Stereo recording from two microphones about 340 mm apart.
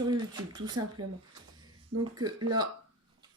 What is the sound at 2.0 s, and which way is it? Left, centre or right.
Speech, centre.